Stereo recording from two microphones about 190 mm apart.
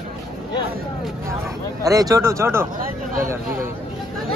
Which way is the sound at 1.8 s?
20° right (ahead or behind).